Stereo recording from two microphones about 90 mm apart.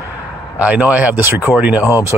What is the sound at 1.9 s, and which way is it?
Speech, 40° left (ahead or behind).